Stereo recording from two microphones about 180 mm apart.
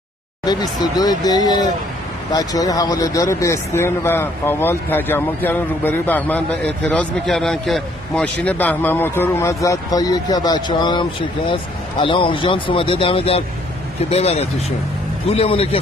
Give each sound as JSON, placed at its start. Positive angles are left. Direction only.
{"t": 0.5, "sound": "a man's voice", "side_deg": 20}